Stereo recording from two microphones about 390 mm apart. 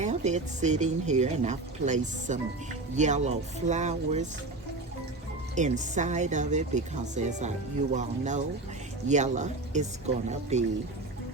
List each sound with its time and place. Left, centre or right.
0.0 s speech: centre
5.5 s speech: centre